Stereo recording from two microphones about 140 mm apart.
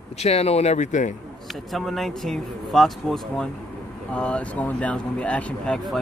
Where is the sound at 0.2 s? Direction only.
50° left (ahead or behind).